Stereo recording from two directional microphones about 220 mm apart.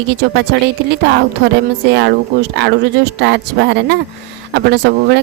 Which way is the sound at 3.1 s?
50° right (ahead or behind).